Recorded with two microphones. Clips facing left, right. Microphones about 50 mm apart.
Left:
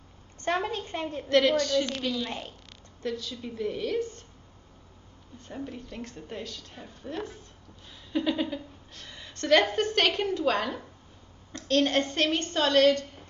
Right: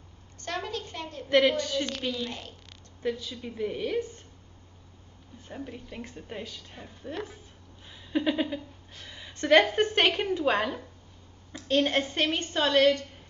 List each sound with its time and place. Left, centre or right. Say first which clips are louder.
0.4 s a child's voice: left 5 dB; left
1.6 s a woman's voice: left 4 dB; centre
1.9 s a woman's voice: left 1 dB; centre
3.0 s a woman's voice: right 1 dB; centre
5.5 s a woman's voice: left 2 dB; centre